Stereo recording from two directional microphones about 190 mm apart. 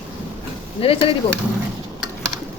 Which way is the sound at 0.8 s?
30° left (ahead or behind).